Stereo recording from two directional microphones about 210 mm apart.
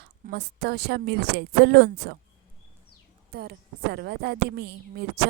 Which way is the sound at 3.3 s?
50° right (ahead or behind).